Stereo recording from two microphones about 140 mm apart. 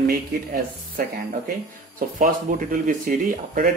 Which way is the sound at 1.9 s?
75° right (ahead or behind).